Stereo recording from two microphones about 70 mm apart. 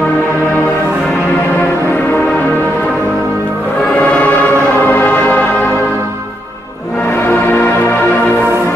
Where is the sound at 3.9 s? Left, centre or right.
Left.